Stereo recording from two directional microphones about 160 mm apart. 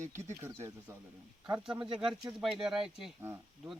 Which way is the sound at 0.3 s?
15° right (ahead or behind).